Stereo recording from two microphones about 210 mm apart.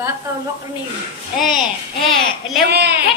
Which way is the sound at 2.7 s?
50° right (ahead or behind).